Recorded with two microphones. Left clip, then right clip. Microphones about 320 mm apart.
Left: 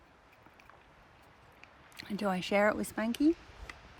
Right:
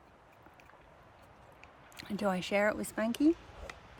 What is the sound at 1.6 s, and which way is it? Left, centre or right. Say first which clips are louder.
Speech: left 1 dB; centre.